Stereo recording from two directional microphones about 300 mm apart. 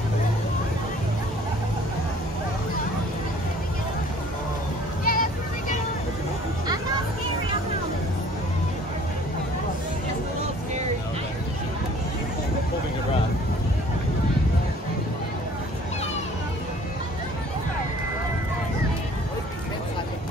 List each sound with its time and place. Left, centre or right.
5.0 s vehicle: left